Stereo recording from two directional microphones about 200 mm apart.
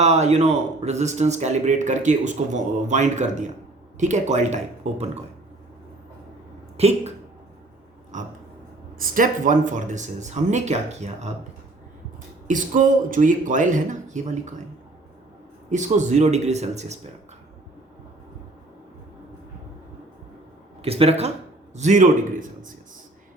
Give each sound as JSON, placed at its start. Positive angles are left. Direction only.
{"t": 0.0, "sound": "speech", "side_deg": -35}
{"t": 6.7, "sound": "speech", "side_deg": -30}
{"t": 8.1, "sound": "a sound", "side_deg": -40}
{"t": 9.0, "sound": "speech", "side_deg": -45}
{"t": 12.5, "sound": "speech", "side_deg": -40}
{"t": 15.7, "sound": "speech", "side_deg": -35}
{"t": 20.8, "sound": "speech", "side_deg": -30}